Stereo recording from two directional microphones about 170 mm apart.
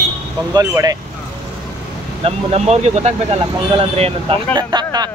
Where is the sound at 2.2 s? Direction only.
40° right (ahead or behind).